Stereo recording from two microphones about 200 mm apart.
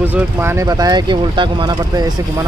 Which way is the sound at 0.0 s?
10° right (ahead or behind).